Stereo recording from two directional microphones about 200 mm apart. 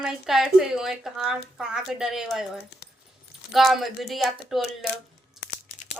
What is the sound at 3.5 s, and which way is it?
Speech, centre (ahead or behind).